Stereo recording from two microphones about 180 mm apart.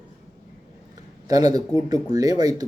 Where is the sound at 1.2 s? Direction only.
20° right (ahead or behind).